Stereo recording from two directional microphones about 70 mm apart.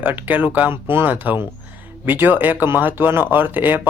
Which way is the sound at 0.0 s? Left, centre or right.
Right.